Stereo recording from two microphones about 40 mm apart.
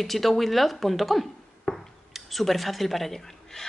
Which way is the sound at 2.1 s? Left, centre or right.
Centre.